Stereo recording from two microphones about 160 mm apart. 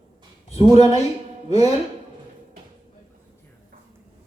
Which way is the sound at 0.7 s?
25° right (ahead or behind).